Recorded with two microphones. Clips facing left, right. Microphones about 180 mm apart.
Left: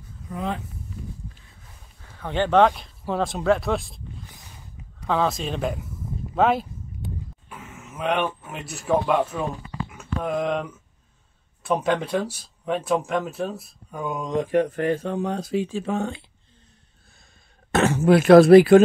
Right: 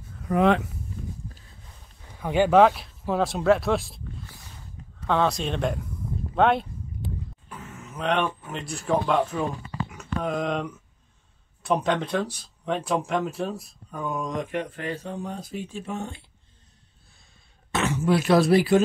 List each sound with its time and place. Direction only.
0.2 s speech: 75° right (ahead or behind)
2.1 s speech: 10° right (ahead or behind)
5.0 s speech: centre (ahead or behind)
6.3 s a sound: centre (ahead or behind)
11.6 s speech: 5° left (ahead or behind)
14.0 s speech: 15° left (ahead or behind)
14.3 s speech: 35° left (ahead or behind); by 16.2 s 90° left
17.6 s speech: 50° left (ahead or behind)